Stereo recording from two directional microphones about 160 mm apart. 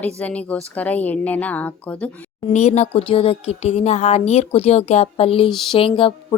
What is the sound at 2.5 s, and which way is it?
A woman's voice, 45° left (ahead or behind).